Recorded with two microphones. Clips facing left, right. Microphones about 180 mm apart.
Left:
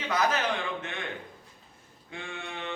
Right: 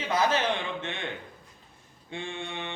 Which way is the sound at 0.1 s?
25° right (ahead or behind).